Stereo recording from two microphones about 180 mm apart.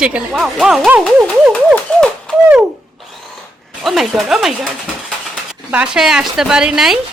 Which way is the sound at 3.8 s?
Centre (ahead or behind).